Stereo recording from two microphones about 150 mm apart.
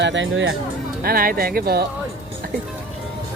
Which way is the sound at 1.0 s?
85° right.